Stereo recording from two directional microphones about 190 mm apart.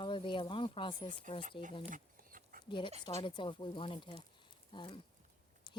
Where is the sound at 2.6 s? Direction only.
25° left (ahead or behind).